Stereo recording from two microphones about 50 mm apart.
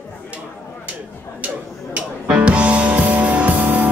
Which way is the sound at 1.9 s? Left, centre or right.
Right.